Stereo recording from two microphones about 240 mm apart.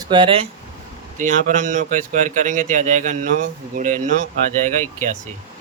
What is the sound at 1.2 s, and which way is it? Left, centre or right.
A man's voice, right.